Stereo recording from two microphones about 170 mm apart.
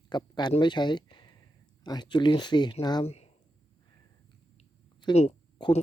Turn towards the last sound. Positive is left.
turn(degrees=30)  # may be behind; listen again after turning